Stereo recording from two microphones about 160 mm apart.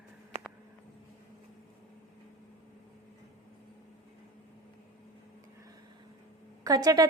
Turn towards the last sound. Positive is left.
turn(degrees=-25)  # may be behind; listen again after turning